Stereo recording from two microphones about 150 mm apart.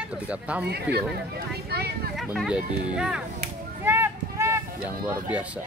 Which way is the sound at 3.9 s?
15° right (ahead or behind).